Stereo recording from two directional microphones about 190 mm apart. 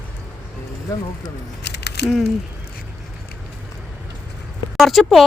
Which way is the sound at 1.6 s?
60° left (ahead or behind).